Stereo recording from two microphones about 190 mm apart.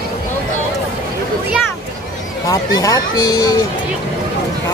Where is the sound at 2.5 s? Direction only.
20° left (ahead or behind).